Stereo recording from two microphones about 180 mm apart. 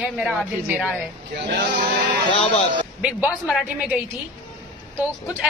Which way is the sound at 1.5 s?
65° right (ahead or behind).